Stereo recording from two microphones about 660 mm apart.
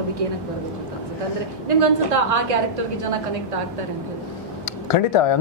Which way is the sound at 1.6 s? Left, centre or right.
Right.